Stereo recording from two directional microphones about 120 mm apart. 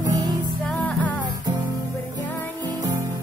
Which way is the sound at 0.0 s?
30° right (ahead or behind).